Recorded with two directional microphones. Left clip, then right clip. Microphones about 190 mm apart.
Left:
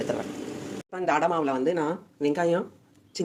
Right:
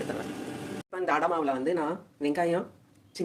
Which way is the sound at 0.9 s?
15° left (ahead or behind).